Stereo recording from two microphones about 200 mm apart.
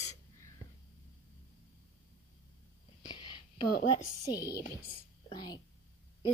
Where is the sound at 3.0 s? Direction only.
20° left (ahead or behind).